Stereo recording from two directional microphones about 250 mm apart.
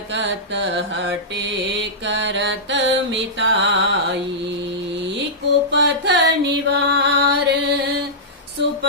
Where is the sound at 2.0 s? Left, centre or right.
Right.